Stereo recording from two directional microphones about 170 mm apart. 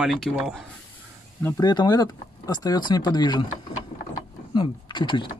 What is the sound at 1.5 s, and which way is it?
Speech, 25° left (ahead or behind).